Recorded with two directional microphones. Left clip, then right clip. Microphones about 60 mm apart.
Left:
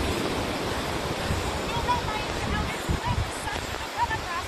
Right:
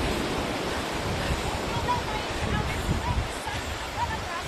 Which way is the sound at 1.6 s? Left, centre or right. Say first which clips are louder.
Left 2 dB; left.